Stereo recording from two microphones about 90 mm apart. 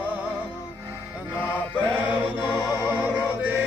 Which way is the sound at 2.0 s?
15° right (ahead or behind).